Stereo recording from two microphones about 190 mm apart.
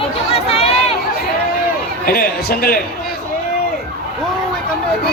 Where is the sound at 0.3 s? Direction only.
30° left (ahead or behind).